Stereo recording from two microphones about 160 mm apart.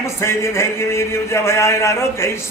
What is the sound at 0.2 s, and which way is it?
A man's voice, 15° left (ahead or behind).